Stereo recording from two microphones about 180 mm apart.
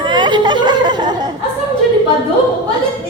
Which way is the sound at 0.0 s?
25° right (ahead or behind).